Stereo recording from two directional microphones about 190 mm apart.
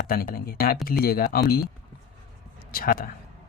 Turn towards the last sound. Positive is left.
turn(degrees=50)  # may be behind; listen again after turning